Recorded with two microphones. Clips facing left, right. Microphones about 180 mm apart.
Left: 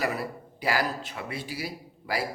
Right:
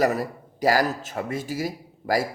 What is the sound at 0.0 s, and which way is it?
A man's voice, 40° right (ahead or behind).